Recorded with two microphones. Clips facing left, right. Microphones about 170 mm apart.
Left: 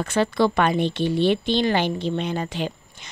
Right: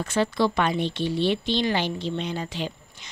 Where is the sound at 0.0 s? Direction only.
60° left (ahead or behind).